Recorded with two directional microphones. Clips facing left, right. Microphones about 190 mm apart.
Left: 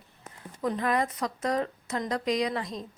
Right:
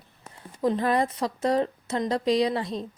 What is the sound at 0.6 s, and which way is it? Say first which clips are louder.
A woman's voice: right 4 dB; 30° right (ahead or behind).